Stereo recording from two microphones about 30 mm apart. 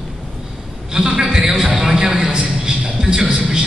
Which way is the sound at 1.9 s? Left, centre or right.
Right.